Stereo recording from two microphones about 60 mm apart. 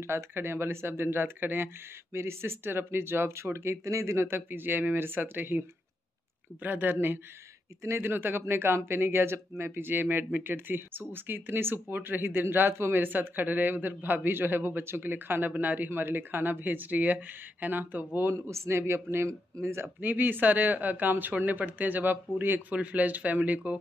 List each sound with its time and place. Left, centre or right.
0.0 s speech: right
18.3 s speech: right
20.0 s speech: right
22.7 s speech: right